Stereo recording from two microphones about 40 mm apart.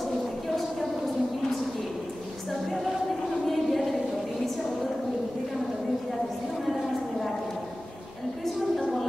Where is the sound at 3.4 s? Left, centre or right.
Centre.